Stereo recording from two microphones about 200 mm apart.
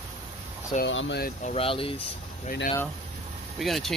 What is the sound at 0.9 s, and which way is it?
Speech, 65° left (ahead or behind).